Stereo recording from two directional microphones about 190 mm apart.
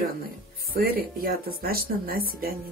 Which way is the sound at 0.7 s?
50° right (ahead or behind).